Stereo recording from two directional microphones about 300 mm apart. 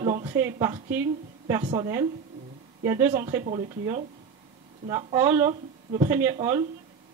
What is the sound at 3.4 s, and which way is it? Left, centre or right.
Speech, right.